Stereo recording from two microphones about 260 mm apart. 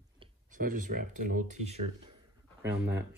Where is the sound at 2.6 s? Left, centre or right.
Centre.